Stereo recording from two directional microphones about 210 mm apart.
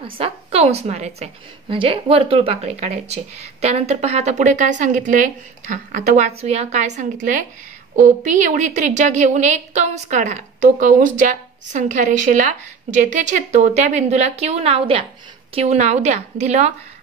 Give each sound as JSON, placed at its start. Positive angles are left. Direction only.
{"t": 0.0, "sound": "a woman's voice", "side_deg": -30}